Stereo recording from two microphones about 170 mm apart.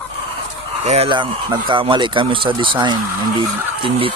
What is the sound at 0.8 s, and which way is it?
Speech, 35° right (ahead or behind).